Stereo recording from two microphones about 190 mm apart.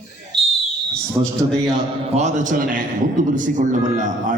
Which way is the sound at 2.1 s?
40° right (ahead or behind).